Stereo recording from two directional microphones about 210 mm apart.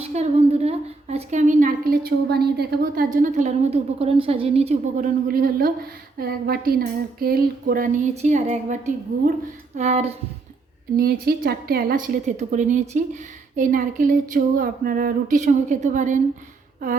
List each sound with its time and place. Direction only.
0.0 s a woman's voice: 30° right (ahead or behind)
5.3 s a woman's voice: 45° right (ahead or behind)
10.9 s a woman's voice: 45° right (ahead or behind)